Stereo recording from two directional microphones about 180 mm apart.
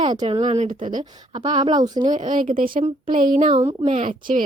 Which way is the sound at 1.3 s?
30° right (ahead or behind).